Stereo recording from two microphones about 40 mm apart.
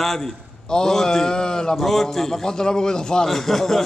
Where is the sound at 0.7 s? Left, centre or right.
Centre.